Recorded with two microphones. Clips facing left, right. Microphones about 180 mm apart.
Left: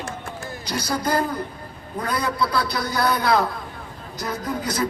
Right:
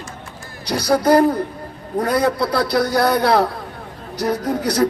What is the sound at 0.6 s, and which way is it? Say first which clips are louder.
Speech: right 9 dB; 65° right (ahead or behind).